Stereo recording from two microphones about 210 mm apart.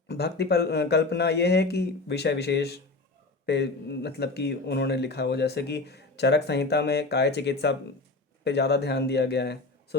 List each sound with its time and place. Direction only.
0.1 s speech: 50° left (ahead or behind)